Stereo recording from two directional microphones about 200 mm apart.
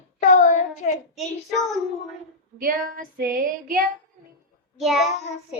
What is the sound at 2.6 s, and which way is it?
Female singing, 45° right (ahead or behind).